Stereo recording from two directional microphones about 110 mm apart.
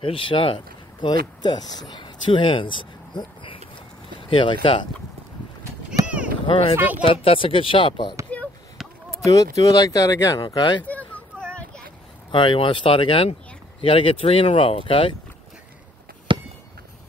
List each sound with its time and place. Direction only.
0.0 s speech: 50° left (ahead or behind)
6.4 s speech: 50° left (ahead or behind)
9.2 s speech: 35° left (ahead or behind)
10.5 s speech: 45° left (ahead or behind)
10.8 s a sound: 15° left (ahead or behind)
12.3 s speech: 50° left (ahead or behind)
16.3 s chop: 45° right (ahead or behind)